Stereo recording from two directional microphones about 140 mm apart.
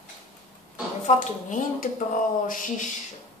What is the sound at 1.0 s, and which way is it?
Speech, 60° left (ahead or behind).